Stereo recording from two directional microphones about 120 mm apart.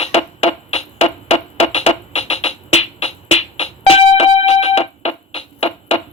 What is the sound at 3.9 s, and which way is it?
Music, 55° left (ahead or behind).